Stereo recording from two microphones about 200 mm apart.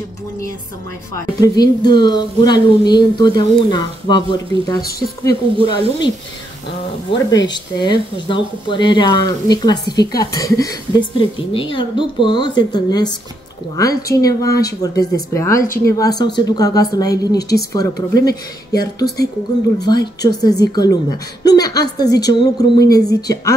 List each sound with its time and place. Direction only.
1.4 s speech: 20° left (ahead or behind)
5.7 s speech: 20° left (ahead or behind)